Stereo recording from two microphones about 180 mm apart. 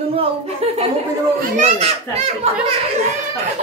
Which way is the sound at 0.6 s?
35° right (ahead or behind).